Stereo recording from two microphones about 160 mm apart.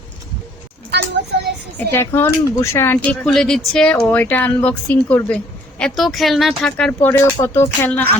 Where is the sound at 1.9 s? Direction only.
15° left (ahead or behind).